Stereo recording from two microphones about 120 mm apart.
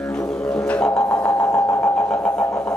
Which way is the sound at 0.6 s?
10° left (ahead or behind).